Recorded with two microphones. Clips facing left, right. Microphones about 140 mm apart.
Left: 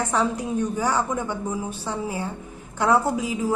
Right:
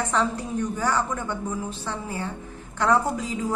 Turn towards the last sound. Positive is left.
turn(degrees=10)  # may be behind; listen again after turning